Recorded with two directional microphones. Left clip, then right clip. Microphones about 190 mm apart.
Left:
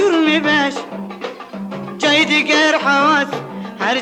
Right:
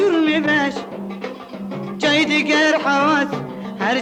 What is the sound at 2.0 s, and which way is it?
Music, 35° left (ahead or behind).